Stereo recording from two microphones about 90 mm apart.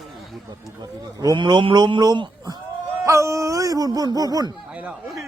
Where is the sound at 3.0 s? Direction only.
35° right (ahead or behind).